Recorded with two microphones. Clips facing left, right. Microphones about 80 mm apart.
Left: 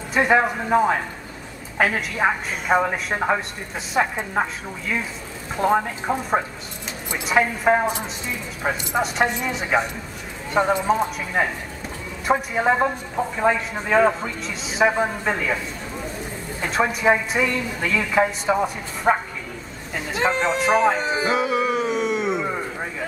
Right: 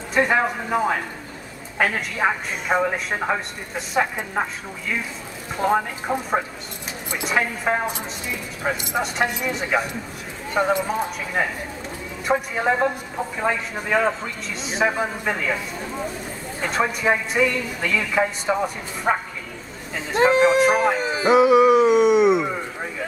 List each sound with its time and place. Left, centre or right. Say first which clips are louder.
0.1 s a woman's voice: left 1 dB; centre
5.6 s a woman's voice: left 1 dB; centre
16.6 s a woman's voice: left 2 dB; centre
21.2 s music: right 7 dB; centre